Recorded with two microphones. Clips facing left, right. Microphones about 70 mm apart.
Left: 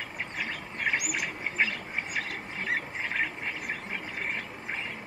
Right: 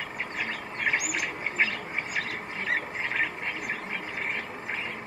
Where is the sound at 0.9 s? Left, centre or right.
Centre.